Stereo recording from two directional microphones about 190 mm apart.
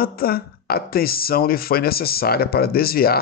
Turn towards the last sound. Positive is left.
turn(degrees=55)  # may be behind; listen again after turning